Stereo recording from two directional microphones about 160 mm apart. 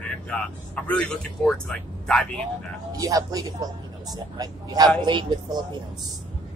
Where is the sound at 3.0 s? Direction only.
20° right (ahead or behind).